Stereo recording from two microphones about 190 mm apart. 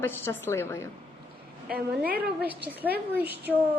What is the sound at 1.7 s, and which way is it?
Speech, 50° right (ahead or behind).